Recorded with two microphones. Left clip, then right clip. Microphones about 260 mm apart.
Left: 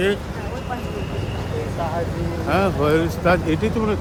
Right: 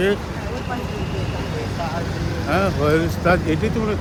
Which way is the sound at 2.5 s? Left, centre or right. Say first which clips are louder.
Even; centre.